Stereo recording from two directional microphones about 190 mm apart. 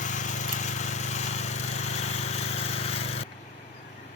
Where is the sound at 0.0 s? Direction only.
40° left (ahead or behind).